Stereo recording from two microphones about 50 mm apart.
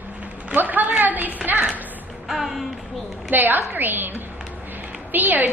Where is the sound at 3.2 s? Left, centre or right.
Right.